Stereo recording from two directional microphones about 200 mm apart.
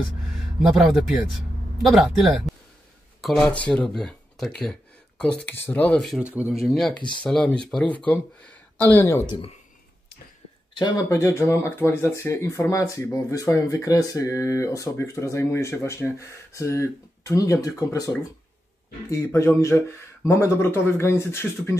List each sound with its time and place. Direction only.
0.6 s speech: centre (ahead or behind)
7.0 s speech: 25° left (ahead or behind)
7.2 s speech: 5° left (ahead or behind)
10.7 s speech: 20° left (ahead or behind)